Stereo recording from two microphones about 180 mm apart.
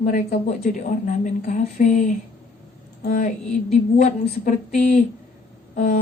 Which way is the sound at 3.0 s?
50° left (ahead or behind).